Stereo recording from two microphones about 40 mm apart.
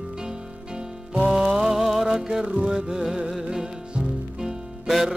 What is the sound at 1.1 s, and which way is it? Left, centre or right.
Music, centre.